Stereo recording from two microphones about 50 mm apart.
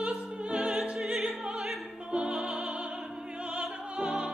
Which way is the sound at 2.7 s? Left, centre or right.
Right.